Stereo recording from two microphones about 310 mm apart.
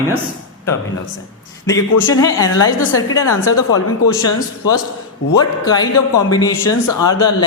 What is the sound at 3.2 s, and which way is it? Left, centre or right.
Speech, left.